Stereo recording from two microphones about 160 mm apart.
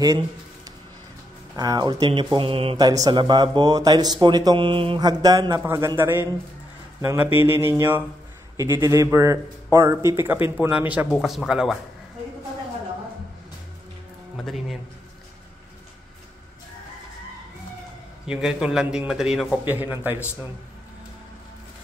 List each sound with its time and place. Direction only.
1.6 s speech: 25° right (ahead or behind)
2.3 s mantra: 35° right (ahead or behind)
2.8 s a man's voice: 25° right (ahead or behind); by 11.8 s centre (ahead or behind)
14.4 s a man's voice: centre (ahead or behind)
18.2 s a man's voice: 5° right (ahead or behind)